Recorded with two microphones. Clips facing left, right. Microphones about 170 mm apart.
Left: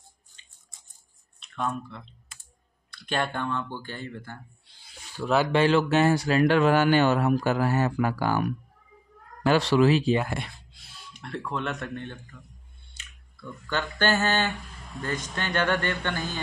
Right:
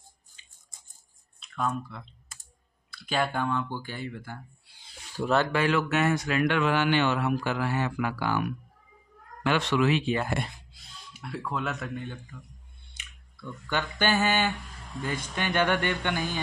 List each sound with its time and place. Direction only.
1.4 s speech: centre (ahead or behind)
5.2 s speech: 5° left (ahead or behind)
5.5 s speech: 30° left (ahead or behind)
10.7 s speech: 5° right (ahead or behind)
13.0 s a sound: 15° right (ahead or behind)
13.7 s speech: 10° right (ahead or behind)